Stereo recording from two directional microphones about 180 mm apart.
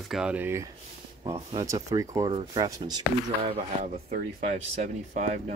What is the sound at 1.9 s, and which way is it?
Speech, 20° right (ahead or behind).